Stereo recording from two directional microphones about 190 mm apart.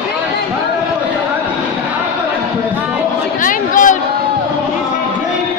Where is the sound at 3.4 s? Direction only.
45° left (ahead or behind).